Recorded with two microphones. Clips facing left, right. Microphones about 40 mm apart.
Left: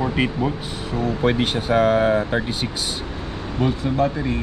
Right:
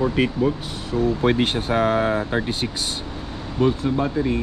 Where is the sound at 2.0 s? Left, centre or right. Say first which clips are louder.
Left 3 dB; centre.